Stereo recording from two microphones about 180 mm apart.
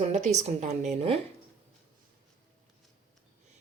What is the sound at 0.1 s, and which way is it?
Speech, 40° right (ahead or behind).